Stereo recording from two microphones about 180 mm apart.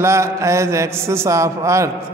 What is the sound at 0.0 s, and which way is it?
A man's voice, 15° right (ahead or behind).